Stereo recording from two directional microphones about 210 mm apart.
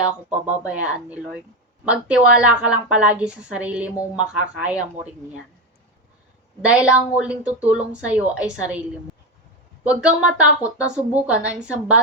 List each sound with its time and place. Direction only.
0.7 s a woman's voice: 5° right (ahead or behind)
6.6 s a woman's voice: 5° right (ahead or behind)
9.8 s a woman's voice: 5° right (ahead or behind)